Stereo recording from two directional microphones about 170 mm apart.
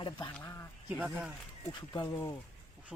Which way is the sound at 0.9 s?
10° right (ahead or behind).